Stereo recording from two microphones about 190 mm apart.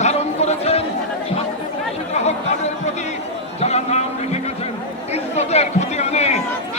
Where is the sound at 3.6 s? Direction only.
35° left (ahead or behind).